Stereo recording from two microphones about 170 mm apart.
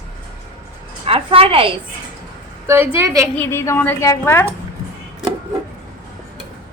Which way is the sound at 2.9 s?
15° right (ahead or behind).